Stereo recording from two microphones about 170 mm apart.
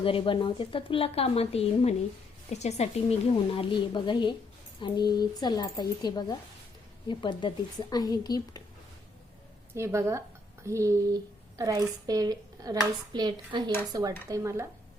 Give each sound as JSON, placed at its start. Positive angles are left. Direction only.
{"t": 0.0, "sound": "a woman's voice", "side_deg": 30}
{"t": 9.7, "sound": "a woman's voice", "side_deg": -15}